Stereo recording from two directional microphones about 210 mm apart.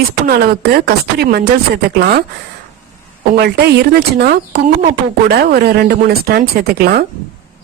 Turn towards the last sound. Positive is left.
turn(degrees=-45)  # may be behind; listen again after turning